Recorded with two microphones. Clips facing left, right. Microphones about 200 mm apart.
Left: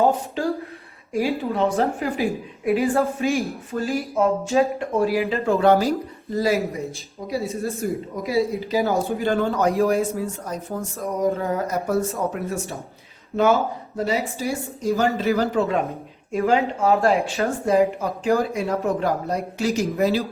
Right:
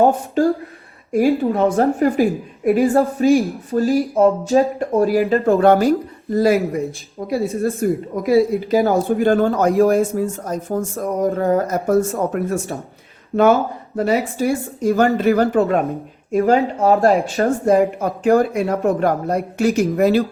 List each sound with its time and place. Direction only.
0.0 s speech: 50° right (ahead or behind)
13.9 s speech: 55° right (ahead or behind)
16.4 s speech: 40° right (ahead or behind)